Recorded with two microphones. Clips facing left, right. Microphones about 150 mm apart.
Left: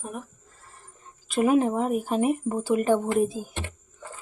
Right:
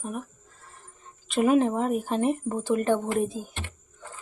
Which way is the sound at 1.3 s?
5° left (ahead or behind).